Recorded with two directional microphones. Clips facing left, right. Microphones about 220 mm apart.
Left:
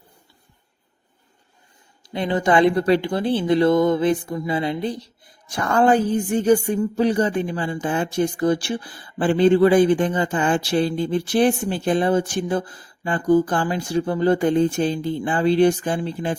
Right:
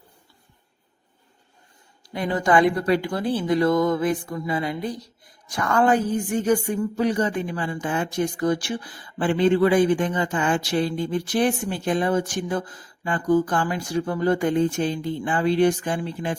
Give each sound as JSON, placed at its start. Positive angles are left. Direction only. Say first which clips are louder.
{"t": 2.0, "sound": "a woman's voice", "louder": "left 2 dB", "side_deg": 25}